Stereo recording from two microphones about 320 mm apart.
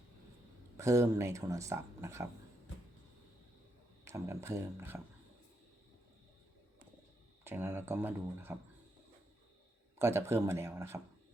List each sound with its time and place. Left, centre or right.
0.8 s speech: centre
4.0 s speech: centre
7.4 s speech: centre
10.0 s speech: centre